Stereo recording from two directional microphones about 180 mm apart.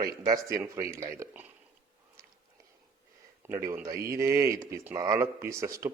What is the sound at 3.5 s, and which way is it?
Speech, 15° right (ahead or behind).